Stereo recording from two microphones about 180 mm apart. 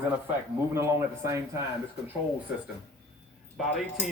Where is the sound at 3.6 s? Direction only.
Centre (ahead or behind).